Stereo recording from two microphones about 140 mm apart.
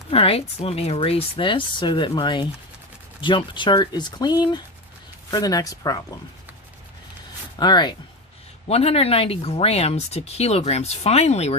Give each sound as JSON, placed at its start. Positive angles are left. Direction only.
{"t": 0.1, "sound": "speech", "side_deg": 45}
{"t": 7.6, "sound": "speech", "side_deg": 30}
{"t": 8.6, "sound": "speech", "side_deg": 45}